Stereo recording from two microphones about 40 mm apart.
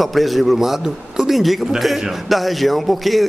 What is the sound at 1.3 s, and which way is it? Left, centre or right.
A man's voice, centre.